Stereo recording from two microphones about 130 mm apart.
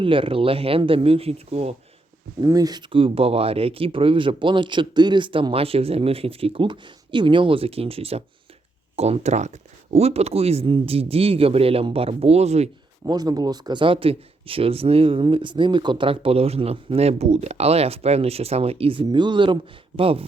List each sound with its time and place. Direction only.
0.0 s speech: 45° right (ahead or behind)
2.4 s speech: 30° right (ahead or behind); by 12.7 s 55° right (ahead or behind)
13.1 s speech: 30° right (ahead or behind); by 20.2 s 45° right (ahead or behind)